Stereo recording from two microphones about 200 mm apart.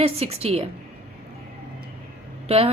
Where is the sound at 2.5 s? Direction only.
30° right (ahead or behind).